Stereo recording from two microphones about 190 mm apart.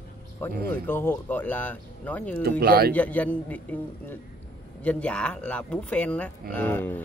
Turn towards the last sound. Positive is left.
turn(degrees=10)  # may be behind; listen again after turning